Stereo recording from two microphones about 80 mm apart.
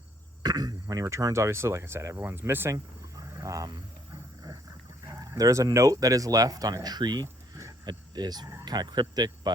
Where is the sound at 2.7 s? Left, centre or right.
Right.